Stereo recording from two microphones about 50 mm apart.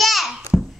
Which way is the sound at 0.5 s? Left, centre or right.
Centre.